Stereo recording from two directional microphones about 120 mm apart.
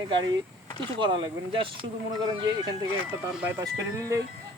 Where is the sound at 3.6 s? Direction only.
25° right (ahead or behind).